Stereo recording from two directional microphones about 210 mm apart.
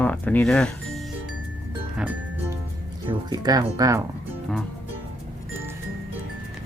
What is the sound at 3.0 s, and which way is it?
Speech, 20° right (ahead or behind).